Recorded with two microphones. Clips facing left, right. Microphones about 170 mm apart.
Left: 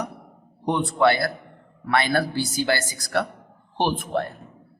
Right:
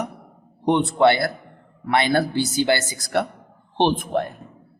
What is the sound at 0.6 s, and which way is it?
A man's voice, 25° right (ahead or behind).